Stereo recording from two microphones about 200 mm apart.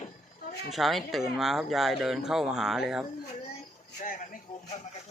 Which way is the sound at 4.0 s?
40° left (ahead or behind).